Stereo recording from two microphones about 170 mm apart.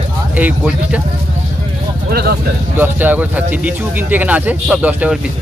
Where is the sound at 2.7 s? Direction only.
10° right (ahead or behind).